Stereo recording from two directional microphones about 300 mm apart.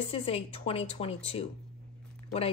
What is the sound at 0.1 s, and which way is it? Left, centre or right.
Speech, centre.